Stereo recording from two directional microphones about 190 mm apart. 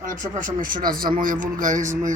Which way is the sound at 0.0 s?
45° right (ahead or behind).